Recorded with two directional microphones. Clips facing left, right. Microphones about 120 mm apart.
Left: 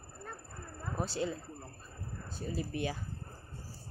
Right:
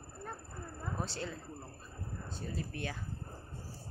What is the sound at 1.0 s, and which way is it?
Speech, 10° left (ahead or behind).